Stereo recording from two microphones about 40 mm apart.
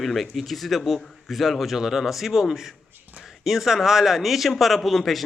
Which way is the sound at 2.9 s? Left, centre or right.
Right.